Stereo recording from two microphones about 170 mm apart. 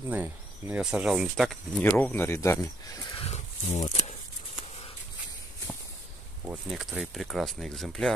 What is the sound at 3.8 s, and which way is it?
Speech, 20° left (ahead or behind).